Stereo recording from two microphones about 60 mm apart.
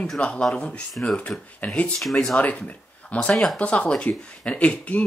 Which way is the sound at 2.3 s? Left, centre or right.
Left.